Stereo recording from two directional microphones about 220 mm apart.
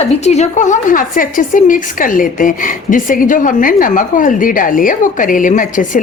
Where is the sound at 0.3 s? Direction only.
30° left (ahead or behind).